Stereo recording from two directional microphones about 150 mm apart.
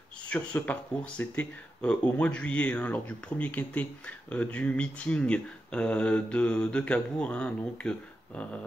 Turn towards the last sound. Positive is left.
turn(degrees=10)  # may be behind; listen again after turning